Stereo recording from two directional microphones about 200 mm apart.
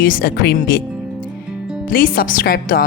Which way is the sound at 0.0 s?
45° left (ahead or behind).